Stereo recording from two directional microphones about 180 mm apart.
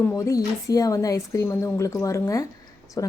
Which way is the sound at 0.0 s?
15° left (ahead or behind).